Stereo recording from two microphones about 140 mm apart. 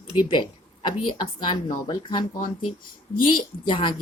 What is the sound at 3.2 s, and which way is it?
Speech, 35° left (ahead or behind).